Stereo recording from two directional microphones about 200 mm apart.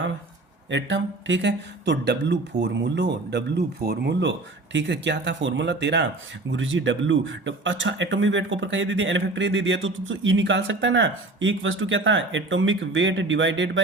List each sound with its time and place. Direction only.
0.7 s speech: 65° right (ahead or behind)
6.5 s speech: 70° right (ahead or behind)